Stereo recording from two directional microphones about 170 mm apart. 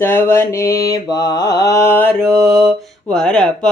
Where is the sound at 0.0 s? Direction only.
15° left (ahead or behind).